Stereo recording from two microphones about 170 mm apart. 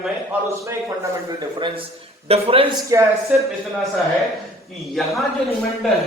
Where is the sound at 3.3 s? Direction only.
5° right (ahead or behind).